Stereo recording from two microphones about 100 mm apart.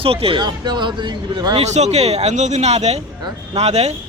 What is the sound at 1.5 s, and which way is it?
Speech, 90° right.